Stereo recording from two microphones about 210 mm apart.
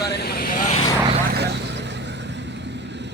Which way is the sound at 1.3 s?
50° right (ahead or behind).